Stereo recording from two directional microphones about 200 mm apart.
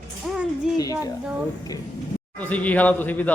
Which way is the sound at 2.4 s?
5° left (ahead or behind).